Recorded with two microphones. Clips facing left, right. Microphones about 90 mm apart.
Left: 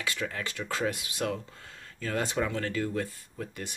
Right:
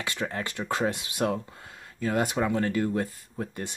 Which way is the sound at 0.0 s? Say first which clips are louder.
Right 2 dB; 25° right (ahead or behind).